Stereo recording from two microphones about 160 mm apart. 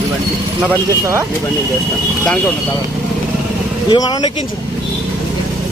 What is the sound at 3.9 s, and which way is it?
Speech, 25° left (ahead or behind).